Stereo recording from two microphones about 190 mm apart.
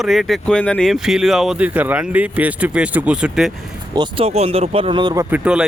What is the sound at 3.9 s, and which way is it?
Speech, 25° right (ahead or behind).